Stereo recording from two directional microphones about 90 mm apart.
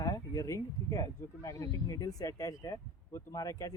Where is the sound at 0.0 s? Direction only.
40° left (ahead or behind).